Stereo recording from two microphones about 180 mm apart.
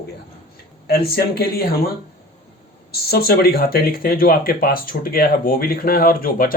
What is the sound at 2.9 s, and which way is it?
Speech, 60° left (ahead or behind).